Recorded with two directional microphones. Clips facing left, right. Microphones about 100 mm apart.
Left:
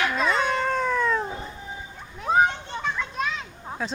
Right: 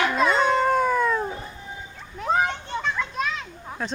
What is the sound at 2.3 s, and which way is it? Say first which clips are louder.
Children playing: left 2 dB; 10° left (ahead or behind).